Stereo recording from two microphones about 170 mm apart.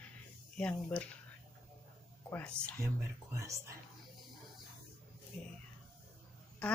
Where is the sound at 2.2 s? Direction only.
10° left (ahead or behind).